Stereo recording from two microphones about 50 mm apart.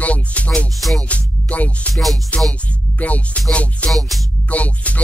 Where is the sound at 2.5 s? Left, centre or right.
Left.